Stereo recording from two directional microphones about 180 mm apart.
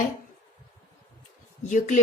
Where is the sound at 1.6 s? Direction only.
45° left (ahead or behind).